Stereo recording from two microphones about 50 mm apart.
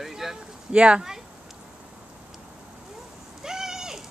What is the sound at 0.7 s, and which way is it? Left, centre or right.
Speech, right.